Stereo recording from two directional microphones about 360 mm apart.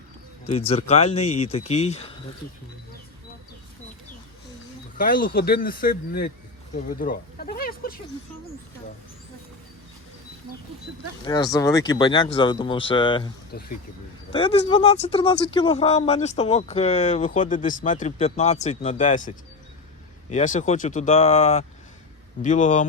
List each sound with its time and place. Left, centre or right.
0.7 s speech: centre
4.9 s speech: left
11.3 s speech: centre
13.5 s speech: left
14.3 s speech: centre
20.3 s speech: centre